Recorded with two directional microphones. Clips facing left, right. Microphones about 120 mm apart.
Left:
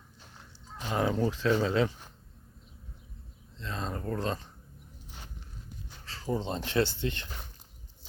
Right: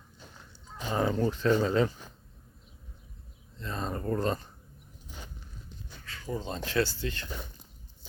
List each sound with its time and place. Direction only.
0.7 s speech: centre (ahead or behind)
3.6 s a sound: 5° right (ahead or behind)
6.1 s speech: 30° left (ahead or behind)